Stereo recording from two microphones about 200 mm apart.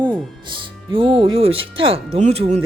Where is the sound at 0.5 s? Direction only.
25° right (ahead or behind).